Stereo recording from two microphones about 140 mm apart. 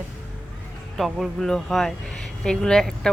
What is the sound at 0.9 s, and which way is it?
Speech, centre (ahead or behind).